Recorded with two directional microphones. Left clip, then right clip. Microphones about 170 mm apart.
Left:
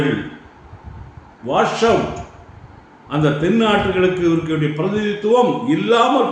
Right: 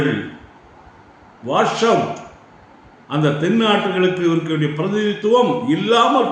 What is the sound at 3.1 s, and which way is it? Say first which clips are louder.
A man's voice: left 1 dB; 5° right (ahead or behind).